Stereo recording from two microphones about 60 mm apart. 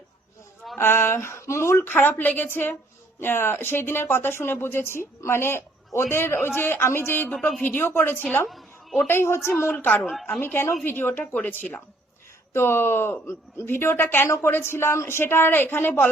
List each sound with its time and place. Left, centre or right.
0.8 s speech: left
1.8 s speech: left
8.4 s a sound: centre
9.0 s speech: left
12.5 s speech: left